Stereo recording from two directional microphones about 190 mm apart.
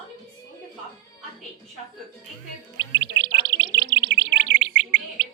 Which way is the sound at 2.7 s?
65° right (ahead or behind).